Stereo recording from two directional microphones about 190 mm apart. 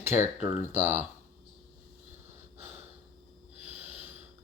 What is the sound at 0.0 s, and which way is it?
Speech, 10° right (ahead or behind).